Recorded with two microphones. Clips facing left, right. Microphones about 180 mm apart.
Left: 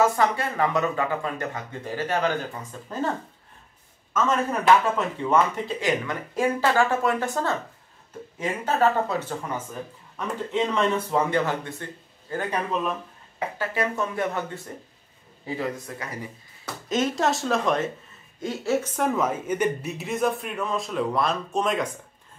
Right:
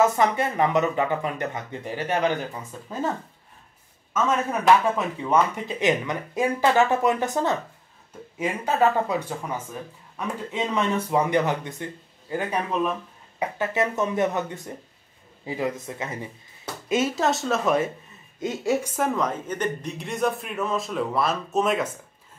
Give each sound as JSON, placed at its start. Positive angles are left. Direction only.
{"t": 0.0, "sound": "speech", "side_deg": -20}
{"t": 4.1, "sound": "speech", "side_deg": -10}
{"t": 10.1, "sound": "speech", "side_deg": -10}
{"t": 16.9, "sound": "speech", "side_deg": -5}
{"t": 18.4, "sound": "speech", "side_deg": -15}
{"t": 18.9, "sound": "speech", "side_deg": 0}